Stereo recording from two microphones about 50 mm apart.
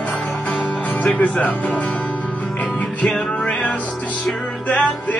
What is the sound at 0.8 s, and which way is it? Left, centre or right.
Music, left.